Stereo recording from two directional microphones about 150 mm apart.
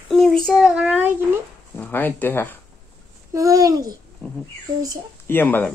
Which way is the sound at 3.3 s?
20° right (ahead or behind).